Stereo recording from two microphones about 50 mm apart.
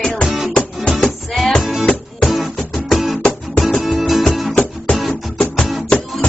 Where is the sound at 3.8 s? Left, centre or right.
Centre.